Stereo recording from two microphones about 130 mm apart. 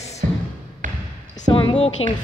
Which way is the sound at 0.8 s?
90° right.